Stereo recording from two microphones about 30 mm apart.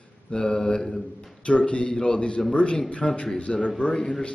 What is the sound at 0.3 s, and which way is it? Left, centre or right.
A man's voice, left.